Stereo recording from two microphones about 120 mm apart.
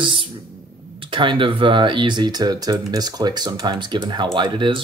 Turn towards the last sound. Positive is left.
turn(degrees=-40)  # may be behind; listen again after turning